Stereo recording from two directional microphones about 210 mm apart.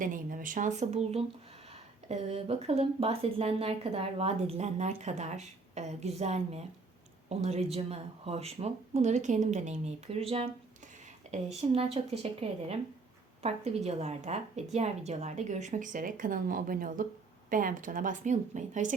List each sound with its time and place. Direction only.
0.0 s speech: 40° right (ahead or behind)